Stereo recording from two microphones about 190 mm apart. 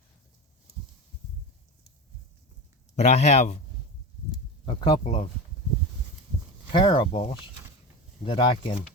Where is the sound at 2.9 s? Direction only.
35° left (ahead or behind).